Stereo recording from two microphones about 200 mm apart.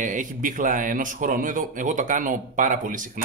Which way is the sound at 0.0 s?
40° right (ahead or behind).